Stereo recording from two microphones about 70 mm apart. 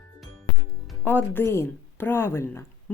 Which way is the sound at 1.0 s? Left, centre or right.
Left.